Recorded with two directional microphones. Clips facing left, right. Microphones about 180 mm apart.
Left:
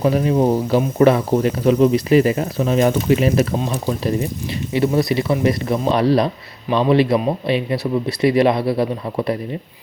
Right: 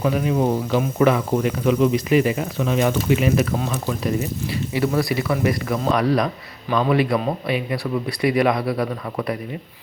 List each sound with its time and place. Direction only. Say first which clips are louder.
0.0 s a man's voice: left 4 dB; 35° left (ahead or behind)